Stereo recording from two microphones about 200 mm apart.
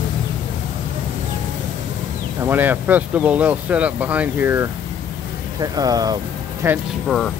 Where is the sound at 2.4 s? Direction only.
10° right (ahead or behind).